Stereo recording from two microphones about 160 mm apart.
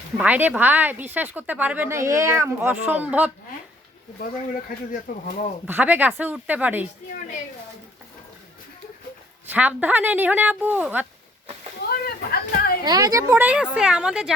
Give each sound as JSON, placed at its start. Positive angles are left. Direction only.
{"t": 0.2, "sound": "a woman's voice", "side_deg": -10}
{"t": 5.1, "sound": "speech", "side_deg": 60}
{"t": 5.6, "sound": "a woman's voice", "side_deg": -10}
{"t": 9.5, "sound": "a woman's voice", "side_deg": -10}
{"t": 11.8, "sound": "a sound", "side_deg": 75}
{"t": 12.8, "sound": "a woman's voice", "side_deg": -25}